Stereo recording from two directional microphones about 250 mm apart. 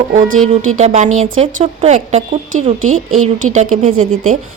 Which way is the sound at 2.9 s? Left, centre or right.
Right.